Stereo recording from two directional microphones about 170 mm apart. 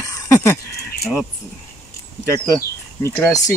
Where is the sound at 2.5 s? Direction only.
20° left (ahead or behind).